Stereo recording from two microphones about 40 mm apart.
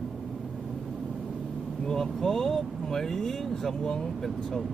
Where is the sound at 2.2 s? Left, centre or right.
Centre.